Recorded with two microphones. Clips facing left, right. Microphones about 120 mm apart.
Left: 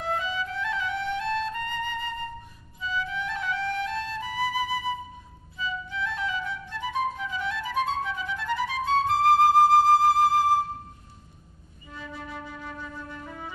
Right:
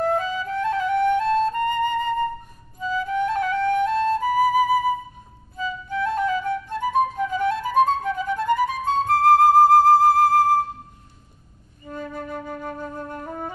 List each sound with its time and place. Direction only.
0.0 s music: 45° right (ahead or behind)
5.6 s flute: 45° right (ahead or behind)
11.8 s flute: 50° right (ahead or behind)